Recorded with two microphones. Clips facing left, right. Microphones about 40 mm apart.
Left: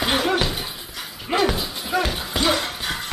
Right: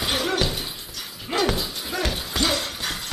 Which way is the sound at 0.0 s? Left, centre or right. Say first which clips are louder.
Left 3 dB; centre.